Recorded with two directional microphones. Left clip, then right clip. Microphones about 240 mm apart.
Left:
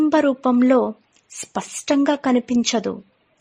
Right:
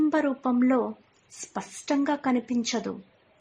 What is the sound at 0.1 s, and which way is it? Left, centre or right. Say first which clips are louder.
A woman's voice: left 8 dB; left.